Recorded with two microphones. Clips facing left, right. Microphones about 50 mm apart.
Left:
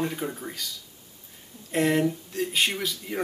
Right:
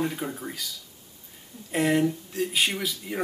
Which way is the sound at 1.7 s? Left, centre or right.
Centre.